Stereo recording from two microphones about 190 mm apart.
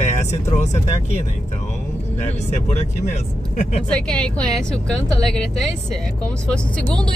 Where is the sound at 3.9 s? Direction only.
5° left (ahead or behind).